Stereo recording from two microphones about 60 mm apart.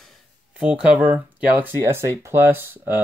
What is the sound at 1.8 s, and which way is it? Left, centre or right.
Speech, right.